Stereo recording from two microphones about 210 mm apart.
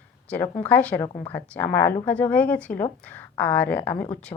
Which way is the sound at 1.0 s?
20° left (ahead or behind).